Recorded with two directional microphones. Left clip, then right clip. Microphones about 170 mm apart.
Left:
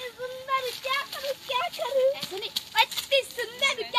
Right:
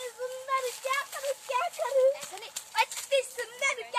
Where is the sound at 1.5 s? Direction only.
5° left (ahead or behind).